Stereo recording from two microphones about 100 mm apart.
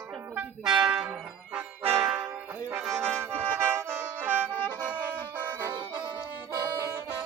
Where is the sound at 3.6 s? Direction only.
20° right (ahead or behind).